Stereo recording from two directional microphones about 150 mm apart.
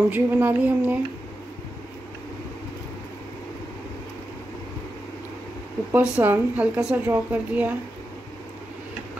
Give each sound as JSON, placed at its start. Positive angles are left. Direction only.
{"t": 0.1, "sound": "a woman's voice", "side_deg": -10}
{"t": 5.9, "sound": "a woman's voice", "side_deg": -15}